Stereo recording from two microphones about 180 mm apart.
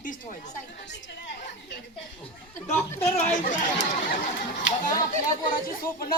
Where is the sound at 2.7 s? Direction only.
10° left (ahead or behind).